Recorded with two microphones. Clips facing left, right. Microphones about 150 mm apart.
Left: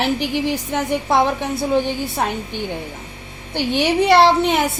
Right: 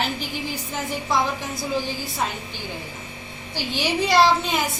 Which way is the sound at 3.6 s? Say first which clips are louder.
Left 7 dB; 60° left (ahead or behind).